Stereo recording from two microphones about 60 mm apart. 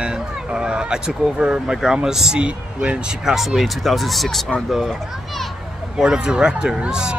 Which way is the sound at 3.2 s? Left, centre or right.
Centre.